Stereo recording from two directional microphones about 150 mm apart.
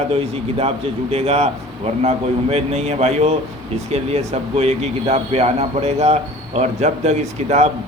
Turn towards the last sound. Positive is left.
turn(degrees=-50)  # may be behind; listen again after turning